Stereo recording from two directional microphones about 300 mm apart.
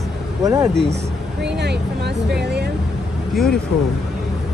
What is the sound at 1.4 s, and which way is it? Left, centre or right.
Vehicle, right.